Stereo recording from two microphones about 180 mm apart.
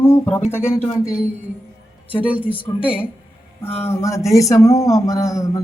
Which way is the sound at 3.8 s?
15° left (ahead or behind).